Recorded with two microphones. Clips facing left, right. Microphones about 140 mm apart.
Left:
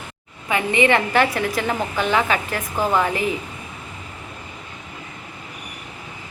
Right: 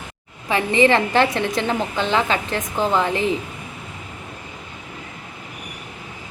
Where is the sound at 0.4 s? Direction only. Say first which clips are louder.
Right 2 dB; 30° right (ahead or behind).